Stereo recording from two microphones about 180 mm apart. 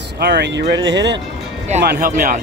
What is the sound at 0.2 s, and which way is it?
Speech, 65° right (ahead or behind).